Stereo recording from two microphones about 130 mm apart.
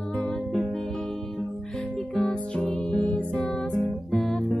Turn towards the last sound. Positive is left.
turn(degrees=5)  # may be behind; listen again after turning